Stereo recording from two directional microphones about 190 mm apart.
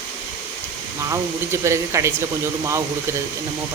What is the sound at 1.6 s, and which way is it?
Speech, 15° right (ahead or behind).